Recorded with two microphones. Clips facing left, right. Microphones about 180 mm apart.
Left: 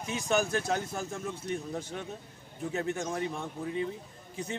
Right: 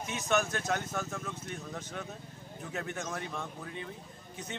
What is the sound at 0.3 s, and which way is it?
Speech, 35° left (ahead or behind).